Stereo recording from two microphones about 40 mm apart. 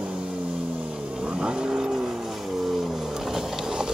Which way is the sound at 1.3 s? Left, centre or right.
Right.